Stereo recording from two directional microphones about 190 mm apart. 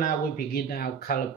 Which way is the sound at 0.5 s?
55° left (ahead or behind).